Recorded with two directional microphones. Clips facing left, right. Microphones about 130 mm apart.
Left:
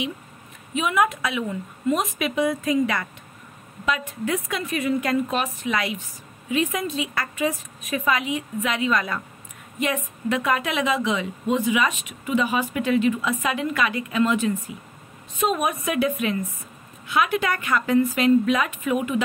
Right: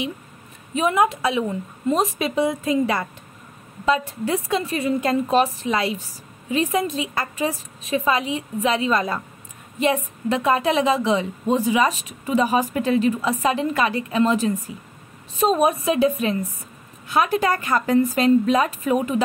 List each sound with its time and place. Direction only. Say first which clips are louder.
0.7 s a woman's voice: right 3 dB; 30° right (ahead or behind)